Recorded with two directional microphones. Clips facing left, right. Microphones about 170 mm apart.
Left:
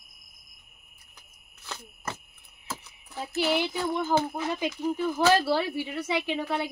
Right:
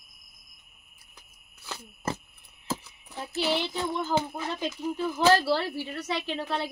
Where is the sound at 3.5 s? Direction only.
10° left (ahead or behind).